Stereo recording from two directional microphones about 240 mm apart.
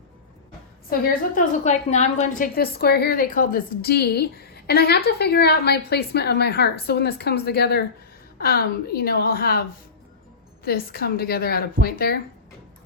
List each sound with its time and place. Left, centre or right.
0.9 s a woman's voice: left